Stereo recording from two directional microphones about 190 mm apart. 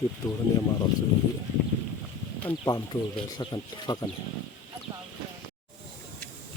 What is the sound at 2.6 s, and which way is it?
Speech, 20° left (ahead or behind).